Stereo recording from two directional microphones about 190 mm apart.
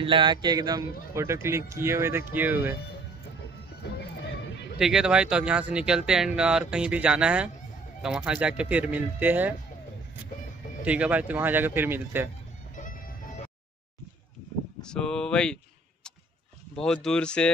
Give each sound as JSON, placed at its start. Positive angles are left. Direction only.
{"t": 0.0, "sound": "a man's voice", "side_deg": -25}
{"t": 4.7, "sound": "speech", "side_deg": 0}
{"t": 10.8, "sound": "speech", "side_deg": -5}
{"t": 14.8, "sound": "a sound", "side_deg": 5}
{"t": 16.7, "sound": "speech", "side_deg": 5}